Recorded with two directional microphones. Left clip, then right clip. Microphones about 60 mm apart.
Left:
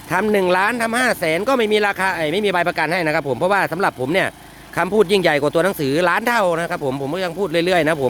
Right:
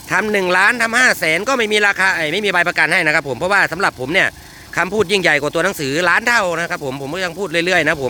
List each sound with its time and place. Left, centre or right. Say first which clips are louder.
0.1 s speech: right 1 dB; left